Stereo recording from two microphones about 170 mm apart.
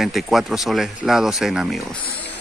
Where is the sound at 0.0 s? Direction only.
Centre (ahead or behind).